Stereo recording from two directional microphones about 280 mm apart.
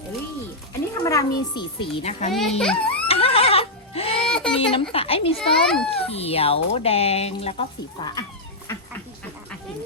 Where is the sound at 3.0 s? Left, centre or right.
Left.